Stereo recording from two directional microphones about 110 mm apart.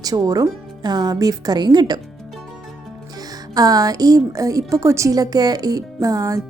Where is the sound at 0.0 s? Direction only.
35° right (ahead or behind).